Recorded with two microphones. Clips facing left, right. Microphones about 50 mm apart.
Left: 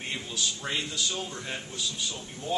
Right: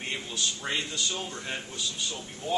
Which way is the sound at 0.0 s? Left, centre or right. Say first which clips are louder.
Even; centre.